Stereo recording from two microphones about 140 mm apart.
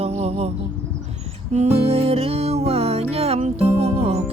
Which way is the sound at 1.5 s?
50° right (ahead or behind).